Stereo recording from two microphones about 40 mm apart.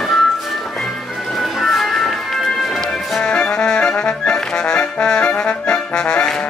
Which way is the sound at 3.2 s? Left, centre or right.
Left.